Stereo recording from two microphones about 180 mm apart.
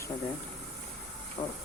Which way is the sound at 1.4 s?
35° left (ahead or behind).